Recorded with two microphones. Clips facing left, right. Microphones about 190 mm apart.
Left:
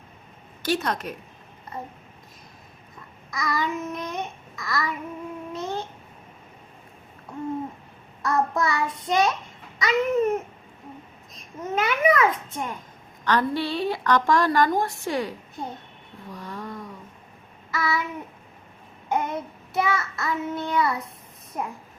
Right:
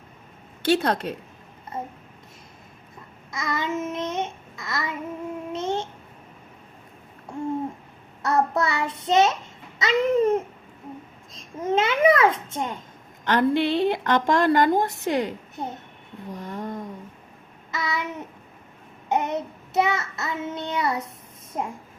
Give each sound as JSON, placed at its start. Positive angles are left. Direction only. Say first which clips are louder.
{"t": 0.6, "sound": "child singing", "louder": "right 4 dB", "side_deg": -30}
{"t": 3.3, "sound": "child singing", "louder": "even", "side_deg": -25}
{"t": 8.2, "sound": "child singing", "louder": "right 1 dB", "side_deg": -25}
{"t": 11.6, "sound": "child singing", "louder": "right 3 dB", "side_deg": -25}
{"t": 16.3, "sound": "a sound", "louder": "right 3 dB", "side_deg": -20}
{"t": 17.7, "sound": "child singing", "louder": "left 2 dB", "side_deg": -20}